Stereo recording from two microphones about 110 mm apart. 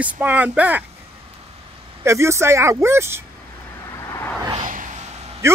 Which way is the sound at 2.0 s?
25° right (ahead or behind).